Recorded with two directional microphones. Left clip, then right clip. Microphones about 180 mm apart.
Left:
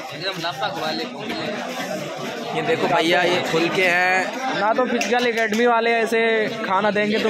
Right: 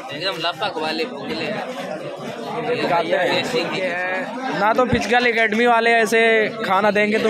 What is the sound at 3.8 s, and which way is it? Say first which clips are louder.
Speech: left 5 dB; 85° left.